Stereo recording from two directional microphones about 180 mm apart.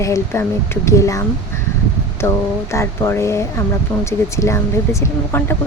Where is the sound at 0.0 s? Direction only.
15° left (ahead or behind).